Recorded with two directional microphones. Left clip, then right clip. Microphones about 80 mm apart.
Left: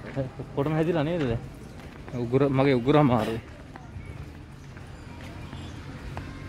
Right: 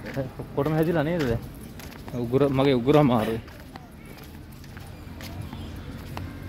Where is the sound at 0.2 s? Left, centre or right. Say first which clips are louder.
Right 2 dB; left.